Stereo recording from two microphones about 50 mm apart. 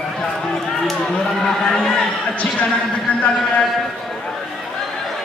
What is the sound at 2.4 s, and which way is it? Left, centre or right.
Speech, left.